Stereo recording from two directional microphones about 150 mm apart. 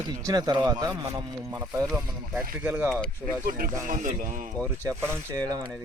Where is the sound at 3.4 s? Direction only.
70° right (ahead or behind).